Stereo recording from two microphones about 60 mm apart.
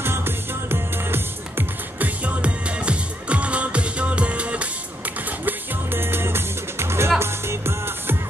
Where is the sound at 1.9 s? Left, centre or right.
Right.